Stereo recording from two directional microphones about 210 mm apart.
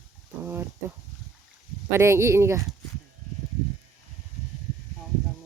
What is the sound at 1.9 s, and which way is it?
Speech, 15° right (ahead or behind).